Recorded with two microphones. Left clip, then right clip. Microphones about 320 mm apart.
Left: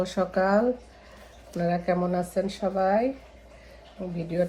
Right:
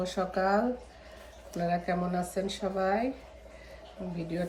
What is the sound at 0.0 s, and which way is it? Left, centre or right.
Speech, centre.